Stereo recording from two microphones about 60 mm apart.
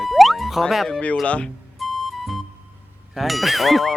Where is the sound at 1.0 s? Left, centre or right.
Left.